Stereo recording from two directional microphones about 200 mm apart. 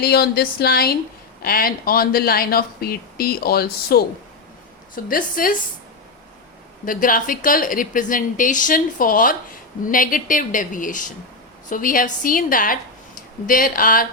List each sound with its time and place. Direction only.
0.0 s speech: 50° left (ahead or behind)
5.0 s speech: 45° left (ahead or behind)
6.8 s a woman's voice: 45° left (ahead or behind)